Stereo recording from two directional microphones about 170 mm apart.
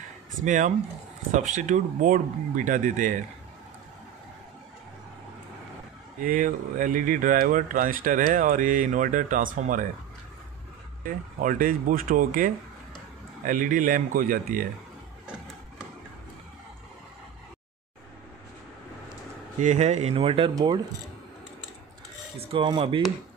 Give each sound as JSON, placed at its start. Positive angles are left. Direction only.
{"t": 0.4, "sound": "speech", "side_deg": -45}
{"t": 6.2, "sound": "speech", "side_deg": -50}
{"t": 11.1, "sound": "speech", "side_deg": -55}
{"t": 19.6, "sound": "speech", "side_deg": -45}
{"t": 22.4, "sound": "speech", "side_deg": -30}